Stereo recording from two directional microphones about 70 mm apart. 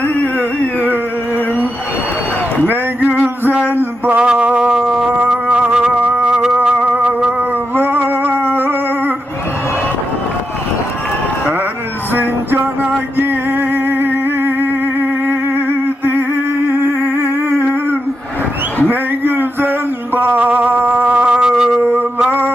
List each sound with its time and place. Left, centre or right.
2.6 s a sound: right
4.2 s music: centre
7.8 s music: right
8.5 s humming: right
12.1 s music: right
16.6 s music: right
18.9 s a sound: right
20.1 s music: right
21.3 s music: centre
22.3 s a sound: right